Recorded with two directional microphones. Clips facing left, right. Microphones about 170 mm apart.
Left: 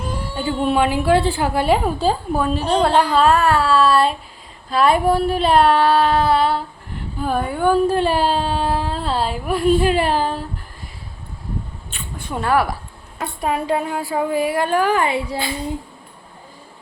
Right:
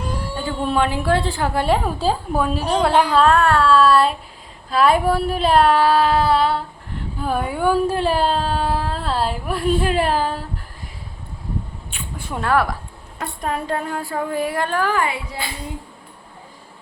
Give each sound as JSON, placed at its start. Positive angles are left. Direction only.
{"t": 0.3, "sound": "speech", "side_deg": 10}
{"t": 3.2, "sound": "speech", "side_deg": 5}
{"t": 11.9, "sound": "mouse", "side_deg": -10}
{"t": 12.4, "sound": "speech", "side_deg": 5}